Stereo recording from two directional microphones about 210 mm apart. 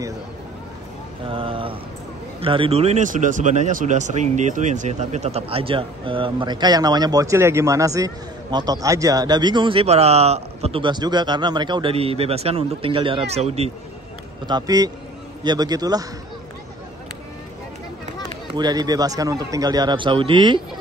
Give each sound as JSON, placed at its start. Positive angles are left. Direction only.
{"t": 1.3, "sound": "speech", "side_deg": -25}
{"t": 14.5, "sound": "a man's voice", "side_deg": -15}
{"t": 18.5, "sound": "speech", "side_deg": -20}